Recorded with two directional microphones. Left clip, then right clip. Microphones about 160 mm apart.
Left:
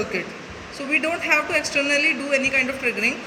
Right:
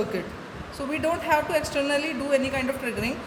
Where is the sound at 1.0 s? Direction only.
40° right (ahead or behind).